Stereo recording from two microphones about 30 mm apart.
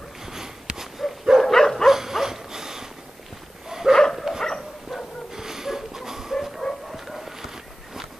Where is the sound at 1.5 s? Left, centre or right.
Centre.